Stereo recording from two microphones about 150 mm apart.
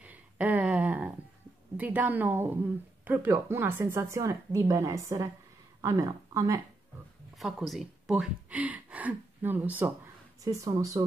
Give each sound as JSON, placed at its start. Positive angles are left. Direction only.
{"t": 0.0, "sound": "a sound", "side_deg": -10}
{"t": 1.8, "sound": "a woman's voice", "side_deg": -10}
{"t": 7.3, "sound": "speech", "side_deg": 0}
{"t": 10.4, "sound": "a woman's voice", "side_deg": -20}